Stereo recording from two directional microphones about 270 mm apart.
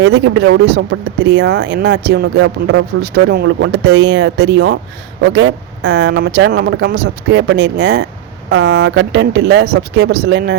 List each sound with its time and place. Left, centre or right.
0.0 s speech: right